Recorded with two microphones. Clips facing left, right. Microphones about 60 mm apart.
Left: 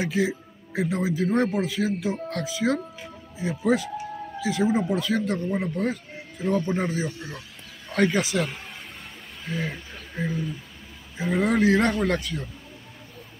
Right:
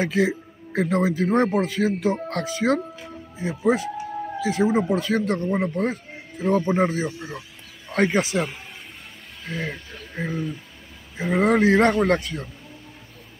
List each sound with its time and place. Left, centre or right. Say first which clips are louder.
0.0 s speech: right 3 dB; right
3.4 s speech: right 1 dB; right
4.5 s speech: right 2 dB; right
7.2 s speech: right 3 dB; centre
7.9 s speech: right 1 dB; right
8.2 s speech: right 2 dB; right
9.4 s speech: right 1 dB; centre
10.2 s speech: right 1 dB; right